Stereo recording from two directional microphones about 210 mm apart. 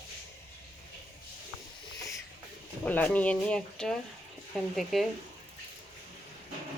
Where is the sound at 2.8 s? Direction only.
5° left (ahead or behind).